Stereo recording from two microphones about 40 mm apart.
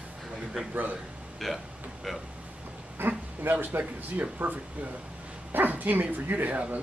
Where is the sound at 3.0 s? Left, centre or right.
Right.